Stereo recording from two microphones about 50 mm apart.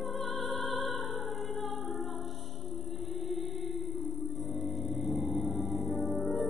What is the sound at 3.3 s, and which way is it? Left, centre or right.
Music, centre.